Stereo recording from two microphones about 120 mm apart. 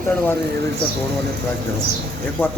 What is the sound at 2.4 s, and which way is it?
Speech, 20° left (ahead or behind).